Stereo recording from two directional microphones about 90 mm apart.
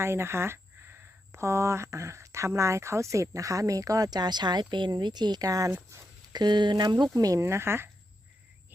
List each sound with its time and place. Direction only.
0.0 s speech: 30° right (ahead or behind)
6.3 s speech: 55° right (ahead or behind)
7.1 s speech: 40° right (ahead or behind)
7.4 s speech: 30° right (ahead or behind)